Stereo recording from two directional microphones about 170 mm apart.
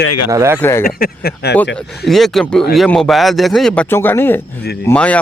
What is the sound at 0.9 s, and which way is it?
Speech, 60° left (ahead or behind).